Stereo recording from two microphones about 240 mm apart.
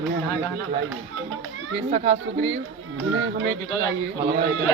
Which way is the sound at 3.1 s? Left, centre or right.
Right.